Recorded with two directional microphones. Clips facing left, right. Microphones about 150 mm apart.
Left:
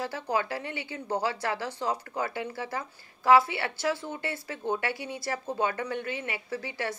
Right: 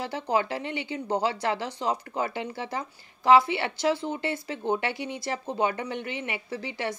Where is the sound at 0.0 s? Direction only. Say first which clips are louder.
Right 3 dB; 20° right (ahead or behind).